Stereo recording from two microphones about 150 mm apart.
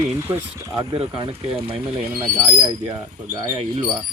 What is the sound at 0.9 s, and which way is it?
Speech, 40° right (ahead or behind).